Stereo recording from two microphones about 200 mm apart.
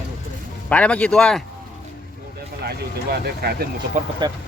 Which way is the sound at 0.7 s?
5° left (ahead or behind).